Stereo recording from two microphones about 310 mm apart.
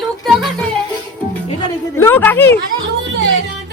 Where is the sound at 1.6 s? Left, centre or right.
Centre.